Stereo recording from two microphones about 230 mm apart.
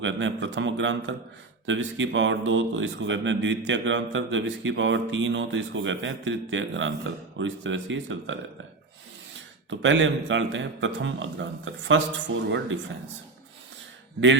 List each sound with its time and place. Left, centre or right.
0.0 s a man's voice: right
9.6 s a man's voice: right